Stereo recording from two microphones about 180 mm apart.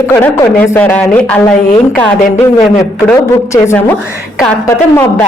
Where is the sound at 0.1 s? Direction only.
15° left (ahead or behind).